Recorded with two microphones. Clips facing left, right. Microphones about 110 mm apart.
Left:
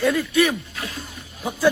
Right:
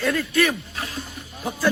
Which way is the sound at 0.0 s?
15° left (ahead or behind).